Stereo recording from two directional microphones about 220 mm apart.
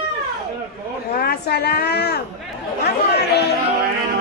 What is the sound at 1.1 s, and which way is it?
A woman's voice, 45° left (ahead or behind).